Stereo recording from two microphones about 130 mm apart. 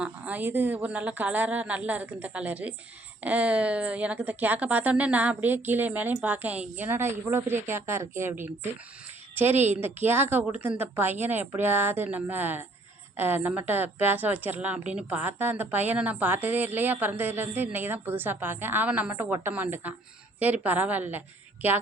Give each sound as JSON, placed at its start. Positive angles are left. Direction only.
{"t": 0.0, "sound": "a woman's voice", "side_deg": -10}